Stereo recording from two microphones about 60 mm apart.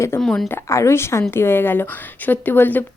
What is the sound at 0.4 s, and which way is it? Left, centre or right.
A woman's voice, left.